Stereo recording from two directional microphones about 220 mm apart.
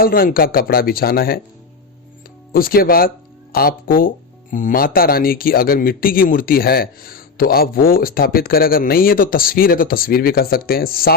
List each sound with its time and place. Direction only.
0.0 s speech: 40° left (ahead or behind)
2.5 s speech: 40° left (ahead or behind)